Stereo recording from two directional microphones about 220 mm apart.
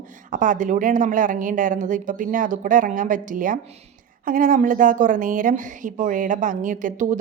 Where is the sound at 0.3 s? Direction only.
35° right (ahead or behind).